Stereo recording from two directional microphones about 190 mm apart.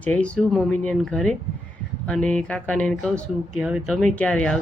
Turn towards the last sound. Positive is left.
turn(degrees=5)  # may be behind; listen again after turning